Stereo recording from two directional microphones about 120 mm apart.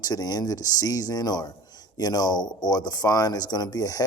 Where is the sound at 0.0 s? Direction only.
35° left (ahead or behind).